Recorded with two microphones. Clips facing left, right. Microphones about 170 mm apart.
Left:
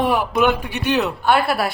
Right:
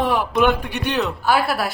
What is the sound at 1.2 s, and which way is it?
Speech, centre (ahead or behind).